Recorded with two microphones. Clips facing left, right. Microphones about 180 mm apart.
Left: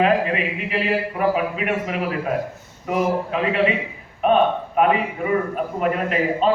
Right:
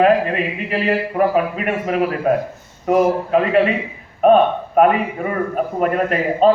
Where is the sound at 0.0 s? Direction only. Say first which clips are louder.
Right 4 dB; 45° right (ahead or behind).